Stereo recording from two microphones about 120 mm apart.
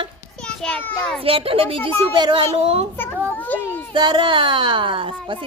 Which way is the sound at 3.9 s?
40° right (ahead or behind).